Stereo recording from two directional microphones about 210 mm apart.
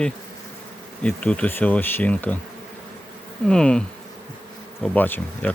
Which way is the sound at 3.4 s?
5° left (ahead or behind).